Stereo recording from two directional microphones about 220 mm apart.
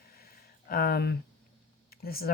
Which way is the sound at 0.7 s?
45° left (ahead or behind).